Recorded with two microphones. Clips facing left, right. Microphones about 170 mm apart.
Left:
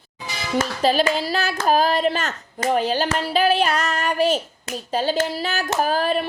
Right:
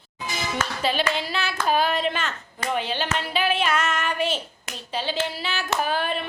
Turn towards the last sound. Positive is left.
turn(degrees=40)  # may be behind; listen again after turning